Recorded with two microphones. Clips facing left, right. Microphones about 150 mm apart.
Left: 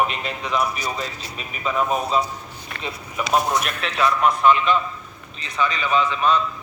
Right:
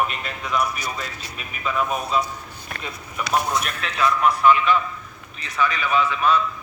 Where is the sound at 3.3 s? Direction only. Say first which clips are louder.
Left 2 dB; 20° left (ahead or behind).